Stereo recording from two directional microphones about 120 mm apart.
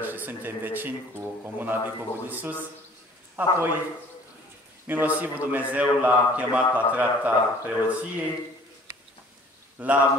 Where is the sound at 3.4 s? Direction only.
15° right (ahead or behind).